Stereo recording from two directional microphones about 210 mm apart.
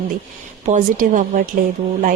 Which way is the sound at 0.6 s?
35° right (ahead or behind).